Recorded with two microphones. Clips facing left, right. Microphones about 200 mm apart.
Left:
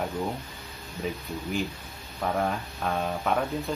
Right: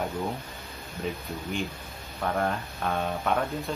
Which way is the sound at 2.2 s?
Centre (ahead or behind).